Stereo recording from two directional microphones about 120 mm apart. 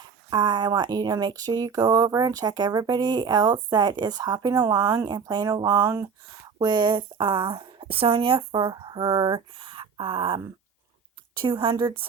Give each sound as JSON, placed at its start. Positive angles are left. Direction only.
{"t": 0.3, "sound": "speech", "side_deg": -35}
{"t": 6.6, "sound": "speech", "side_deg": -40}